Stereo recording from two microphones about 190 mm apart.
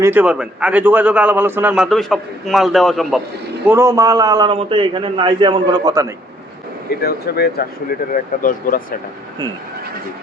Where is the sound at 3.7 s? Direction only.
15° right (ahead or behind).